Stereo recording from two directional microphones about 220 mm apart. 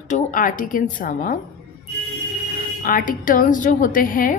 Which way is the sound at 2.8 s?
40° left (ahead or behind).